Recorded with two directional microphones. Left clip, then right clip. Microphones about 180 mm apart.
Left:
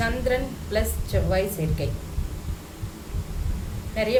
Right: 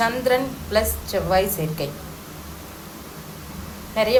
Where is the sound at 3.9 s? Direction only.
15° left (ahead or behind).